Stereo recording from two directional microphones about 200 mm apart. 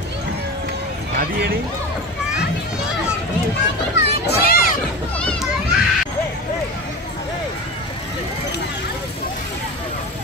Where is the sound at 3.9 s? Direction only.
55° left (ahead or behind).